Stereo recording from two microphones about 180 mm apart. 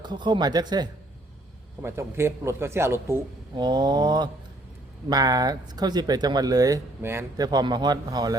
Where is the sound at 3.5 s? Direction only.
25° right (ahead or behind).